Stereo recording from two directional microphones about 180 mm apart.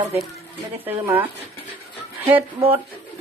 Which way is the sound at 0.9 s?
10° right (ahead or behind).